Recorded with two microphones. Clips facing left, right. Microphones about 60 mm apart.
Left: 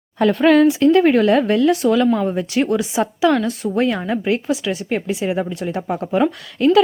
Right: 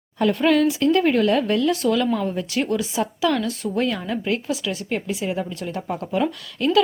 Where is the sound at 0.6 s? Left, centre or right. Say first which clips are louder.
Left 6 dB; left.